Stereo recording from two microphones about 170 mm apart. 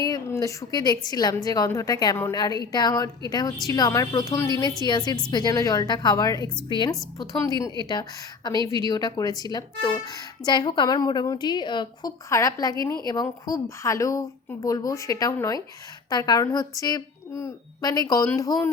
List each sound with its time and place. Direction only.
0.0 s a woman's voice: 20° left (ahead or behind)